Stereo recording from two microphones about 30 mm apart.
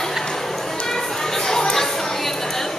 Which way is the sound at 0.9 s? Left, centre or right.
Centre.